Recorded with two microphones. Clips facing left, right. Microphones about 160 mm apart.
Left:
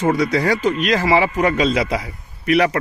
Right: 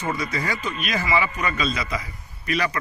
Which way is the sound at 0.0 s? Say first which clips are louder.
Left 10 dB; 85° left.